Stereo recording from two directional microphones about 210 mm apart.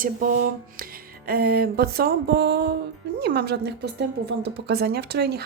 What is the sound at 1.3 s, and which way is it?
Speech, 45° right (ahead or behind).